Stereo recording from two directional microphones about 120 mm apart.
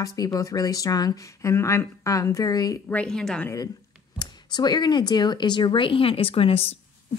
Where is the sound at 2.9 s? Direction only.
10° left (ahead or behind).